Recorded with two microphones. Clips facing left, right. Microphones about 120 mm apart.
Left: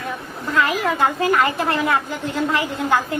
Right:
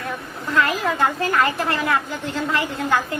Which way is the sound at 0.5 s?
15° left (ahead or behind).